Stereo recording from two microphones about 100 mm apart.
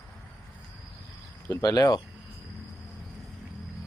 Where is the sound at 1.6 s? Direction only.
45° left (ahead or behind).